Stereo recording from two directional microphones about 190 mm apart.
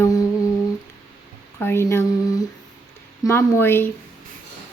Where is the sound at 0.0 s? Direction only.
20° left (ahead or behind).